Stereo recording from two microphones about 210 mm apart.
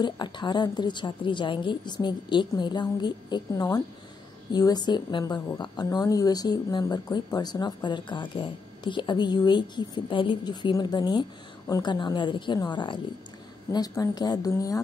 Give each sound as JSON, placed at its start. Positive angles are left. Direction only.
{"t": 0.0, "sound": "a woman's voice", "side_deg": 20}